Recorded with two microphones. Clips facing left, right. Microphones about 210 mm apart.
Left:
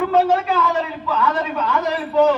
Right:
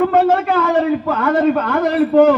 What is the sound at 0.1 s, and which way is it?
A man's voice, 55° right (ahead or behind).